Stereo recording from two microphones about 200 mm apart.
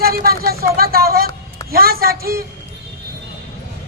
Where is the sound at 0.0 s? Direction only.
50° right (ahead or behind).